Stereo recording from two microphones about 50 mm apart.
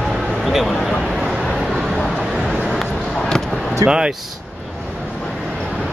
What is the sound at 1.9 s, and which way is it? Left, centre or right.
Vehicle, centre.